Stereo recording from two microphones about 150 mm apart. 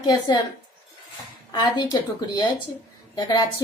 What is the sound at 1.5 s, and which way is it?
A woman's voice, 30° left (ahead or behind).